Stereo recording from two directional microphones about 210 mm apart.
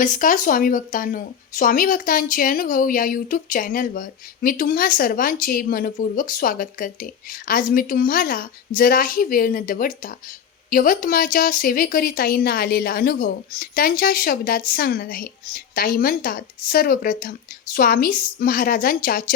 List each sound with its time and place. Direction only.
0.0 s speech: 40° left (ahead or behind)